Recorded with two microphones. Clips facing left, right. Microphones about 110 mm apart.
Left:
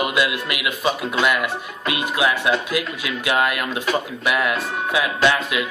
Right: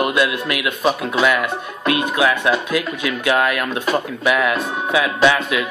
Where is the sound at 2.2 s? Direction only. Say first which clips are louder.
Right 2 dB; 60° right (ahead or behind).